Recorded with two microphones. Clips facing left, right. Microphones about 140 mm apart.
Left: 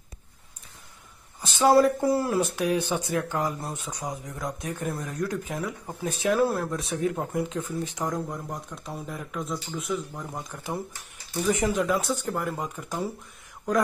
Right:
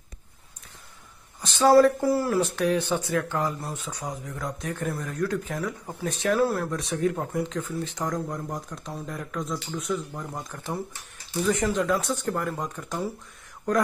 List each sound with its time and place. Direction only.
1.4 s speech: 20° left (ahead or behind)
8.5 s speech: centre (ahead or behind)
11.4 s speech: 15° left (ahead or behind)
11.8 s speech: centre (ahead or behind)